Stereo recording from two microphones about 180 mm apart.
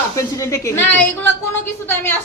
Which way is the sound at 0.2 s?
15° left (ahead or behind).